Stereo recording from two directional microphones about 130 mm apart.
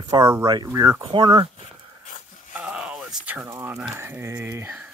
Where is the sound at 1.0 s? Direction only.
40° right (ahead or behind).